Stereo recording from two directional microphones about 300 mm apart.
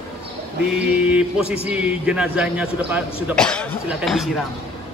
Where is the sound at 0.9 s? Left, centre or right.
Centre.